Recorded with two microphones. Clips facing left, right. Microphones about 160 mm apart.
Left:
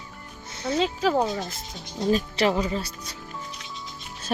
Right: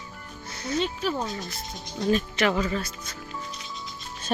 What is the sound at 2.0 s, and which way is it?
Speech, 30° left (ahead or behind).